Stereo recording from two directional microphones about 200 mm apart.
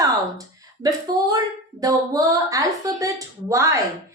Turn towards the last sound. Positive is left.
turn(degrees=-15)  # may be behind; listen again after turning